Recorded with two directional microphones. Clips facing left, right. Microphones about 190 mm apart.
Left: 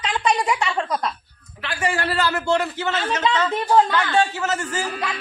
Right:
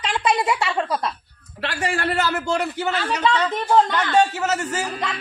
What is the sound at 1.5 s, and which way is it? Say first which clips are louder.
Speech: right 3 dB; 65° right (ahead or behind).